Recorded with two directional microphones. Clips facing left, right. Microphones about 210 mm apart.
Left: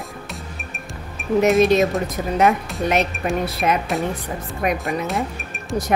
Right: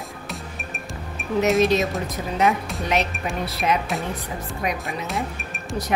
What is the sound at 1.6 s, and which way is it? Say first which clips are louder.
Speech: left 4 dB; 50° left (ahead or behind).